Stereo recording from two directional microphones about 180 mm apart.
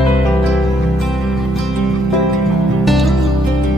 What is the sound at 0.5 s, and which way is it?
Music, centre (ahead or behind).